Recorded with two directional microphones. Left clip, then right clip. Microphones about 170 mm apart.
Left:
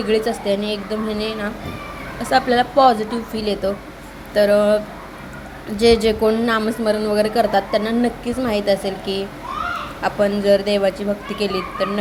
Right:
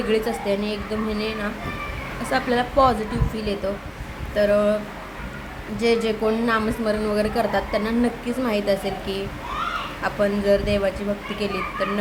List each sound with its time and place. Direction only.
0.1 s a woman's voice: 15° left (ahead or behind)
4.4 s a sound: 25° left (ahead or behind)
5.7 s a woman's voice: 25° left (ahead or behind)